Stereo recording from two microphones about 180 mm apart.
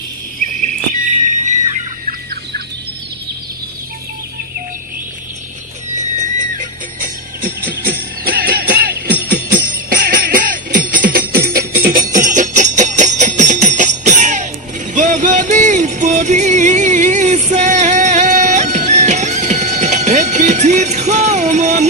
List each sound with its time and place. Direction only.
0.6 s a sound: 45° right (ahead or behind)
6.1 s jingle bell: 45° right (ahead or behind)
14.9 s music: 45° right (ahead or behind)